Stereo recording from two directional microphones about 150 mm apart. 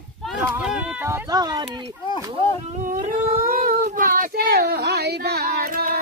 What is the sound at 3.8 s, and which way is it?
Child singing, 65° right (ahead or behind).